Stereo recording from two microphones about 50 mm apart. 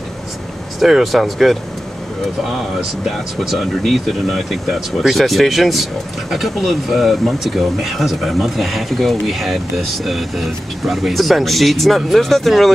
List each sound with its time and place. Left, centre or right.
0.7 s speech: centre
3.1 s speech: centre